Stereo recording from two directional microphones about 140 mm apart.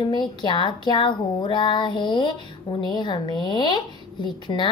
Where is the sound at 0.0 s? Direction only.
30° left (ahead or behind).